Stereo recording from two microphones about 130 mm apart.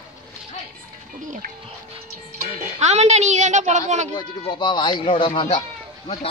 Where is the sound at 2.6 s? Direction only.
60° right (ahead or behind).